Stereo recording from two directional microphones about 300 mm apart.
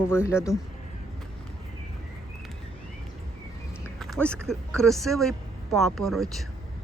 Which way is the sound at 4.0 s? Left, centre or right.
Centre.